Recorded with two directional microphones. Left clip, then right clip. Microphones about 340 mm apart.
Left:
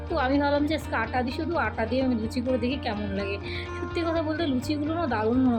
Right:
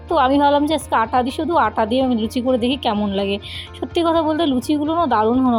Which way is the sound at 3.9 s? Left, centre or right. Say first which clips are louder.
Right 11 dB; right.